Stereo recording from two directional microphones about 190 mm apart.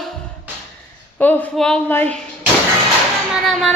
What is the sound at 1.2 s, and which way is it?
Speech, 10° left (ahead or behind).